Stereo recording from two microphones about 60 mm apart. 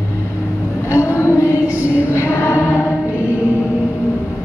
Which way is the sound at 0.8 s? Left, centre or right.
Left.